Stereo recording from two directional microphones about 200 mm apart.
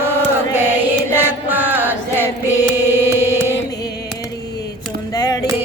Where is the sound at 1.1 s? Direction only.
10° right (ahead or behind).